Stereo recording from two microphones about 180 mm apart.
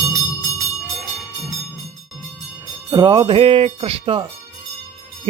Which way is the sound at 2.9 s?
25° right (ahead or behind).